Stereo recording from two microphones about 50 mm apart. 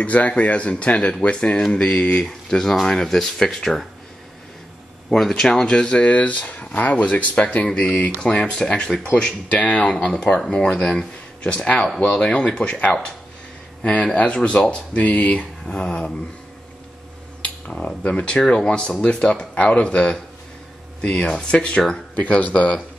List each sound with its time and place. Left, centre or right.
0.0 s speech: left; by 3.8 s centre
5.3 s speech: centre
9.5 s speech: left
14.1 s speech: left
15.6 s speech: centre
17.7 s speech: left
22.1 s speech: left